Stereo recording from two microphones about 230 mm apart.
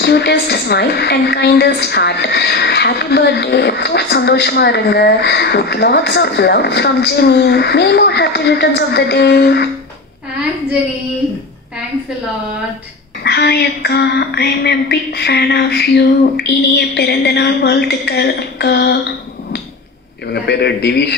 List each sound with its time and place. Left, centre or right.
0.0 s a woman's voice: left
13.2 s a woman's voice: left
20.3 s a woman's voice: left